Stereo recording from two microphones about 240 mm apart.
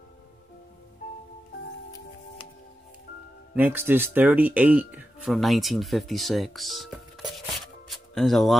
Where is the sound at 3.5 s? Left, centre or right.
Centre.